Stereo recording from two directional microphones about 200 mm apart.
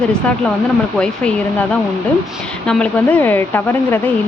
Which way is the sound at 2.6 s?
5° left (ahead or behind).